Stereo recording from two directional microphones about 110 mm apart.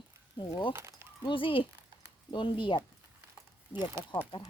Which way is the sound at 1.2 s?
50° left (ahead or behind).